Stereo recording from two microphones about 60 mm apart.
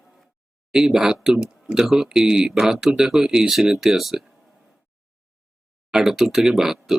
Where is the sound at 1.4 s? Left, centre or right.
Centre.